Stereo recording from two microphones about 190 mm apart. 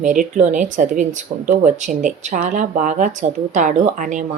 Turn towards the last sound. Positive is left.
turn(degrees=-40)  # may be behind; listen again after turning